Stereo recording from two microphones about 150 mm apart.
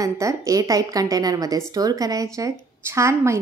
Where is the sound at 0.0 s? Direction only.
20° right (ahead or behind).